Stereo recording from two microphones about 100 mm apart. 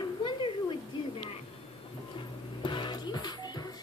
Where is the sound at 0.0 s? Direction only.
55° left (ahead or behind).